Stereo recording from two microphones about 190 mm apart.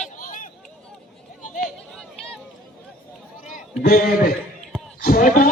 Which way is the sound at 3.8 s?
50° left (ahead or behind).